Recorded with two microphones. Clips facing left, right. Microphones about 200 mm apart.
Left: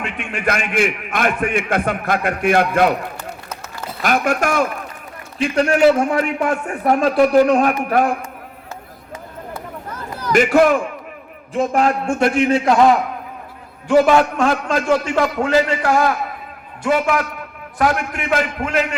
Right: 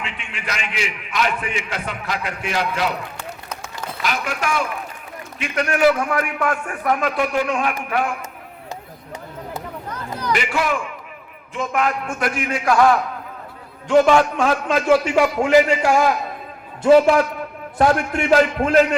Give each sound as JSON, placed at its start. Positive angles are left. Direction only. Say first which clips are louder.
{"t": 0.0, "sound": "a man's voice", "louder": "left 9 dB", "side_deg": 55}
{"t": 4.0, "sound": "a man's voice", "louder": "left 7 dB", "side_deg": 50}
{"t": 5.4, "sound": "a man's voice", "louder": "left 4 dB", "side_deg": 30}
{"t": 9.9, "sound": "a sound", "louder": "even", "side_deg": 5}
{"t": 10.3, "sound": "a man's voice", "louder": "left 10 dB", "side_deg": 45}
{"t": 11.5, "sound": "a man's voice", "louder": "left 5 dB", "side_deg": 35}
{"t": 13.8, "sound": "a man's voice", "louder": "left 1 dB", "side_deg": 5}
{"t": 16.8, "sound": "a man's voice", "louder": "right 5 dB", "side_deg": -30}